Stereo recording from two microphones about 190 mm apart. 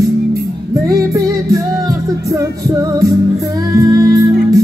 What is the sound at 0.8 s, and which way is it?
Music, 20° right (ahead or behind).